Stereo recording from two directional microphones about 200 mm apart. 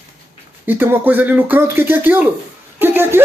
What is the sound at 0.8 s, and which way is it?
Speech, 10° right (ahead or behind).